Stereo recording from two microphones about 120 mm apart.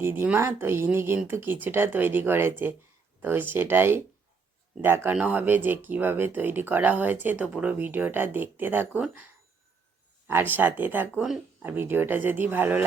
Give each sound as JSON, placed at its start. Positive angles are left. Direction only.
{"t": 0.0, "sound": "speech", "side_deg": -15}
{"t": 10.2, "sound": "speech", "side_deg": -20}